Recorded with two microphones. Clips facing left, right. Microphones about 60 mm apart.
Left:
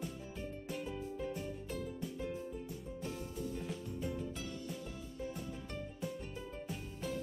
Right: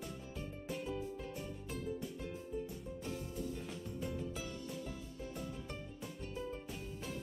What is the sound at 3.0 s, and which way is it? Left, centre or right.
Music, centre.